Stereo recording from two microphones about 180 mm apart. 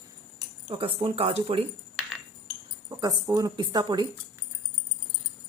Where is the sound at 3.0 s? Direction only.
20° right (ahead or behind).